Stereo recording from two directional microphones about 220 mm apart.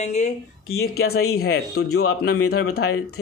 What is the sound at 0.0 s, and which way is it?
Speech, 30° left (ahead or behind).